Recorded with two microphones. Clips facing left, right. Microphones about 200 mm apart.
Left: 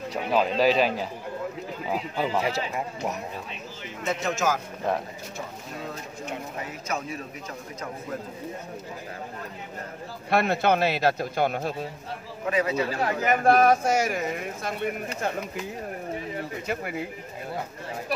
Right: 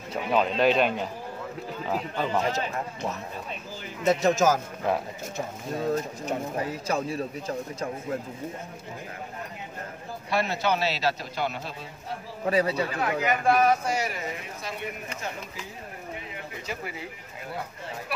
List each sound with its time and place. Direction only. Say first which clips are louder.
0.1 s speech: even; centre (ahead or behind)
4.0 s speech: right 5 dB; 35° right (ahead or behind)
4.9 s speech: right 1 dB; 5° right (ahead or behind)
5.8 s speech: right 9 dB; 40° right (ahead or behind)
10.3 s speech: left 4 dB; 55° left (ahead or behind)
12.4 s speech: right 1 dB; 35° right (ahead or behind)
12.9 s speech: left 2 dB; 40° left (ahead or behind)
16.6 s speech: left 4 dB; 55° left (ahead or behind)